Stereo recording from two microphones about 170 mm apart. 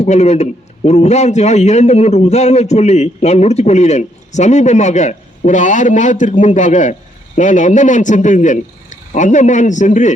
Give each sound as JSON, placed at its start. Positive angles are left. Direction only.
{"t": 0.0, "sound": "a man's voice", "side_deg": 40}